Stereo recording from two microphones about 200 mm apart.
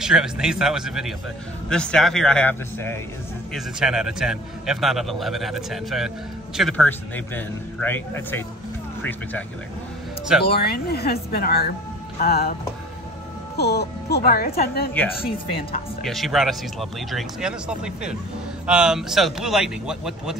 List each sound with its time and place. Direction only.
0.0 s a man's voice: 5° right (ahead or behind)
3.5 s a man's voice: 5° right (ahead or behind)
6.9 s a man's voice: 10° left (ahead or behind)
10.5 s speech: 50° left (ahead or behind)
13.6 s speech: 55° left (ahead or behind)
16.0 s a man's voice: centre (ahead or behind)